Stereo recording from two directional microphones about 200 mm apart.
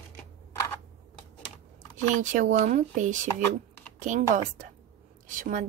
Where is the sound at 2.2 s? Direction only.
40° right (ahead or behind).